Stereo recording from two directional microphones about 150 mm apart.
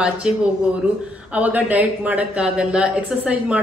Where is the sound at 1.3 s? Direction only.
10° right (ahead or behind).